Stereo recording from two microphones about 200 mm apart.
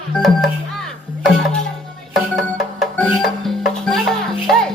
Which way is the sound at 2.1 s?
Centre (ahead or behind).